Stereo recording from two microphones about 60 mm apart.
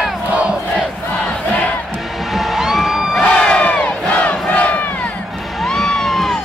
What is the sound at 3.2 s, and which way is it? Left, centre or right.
Crowd, left.